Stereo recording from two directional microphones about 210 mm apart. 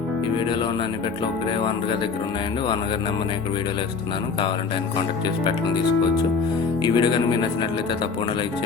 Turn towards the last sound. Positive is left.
turn(degrees=20)  # may be behind; listen again after turning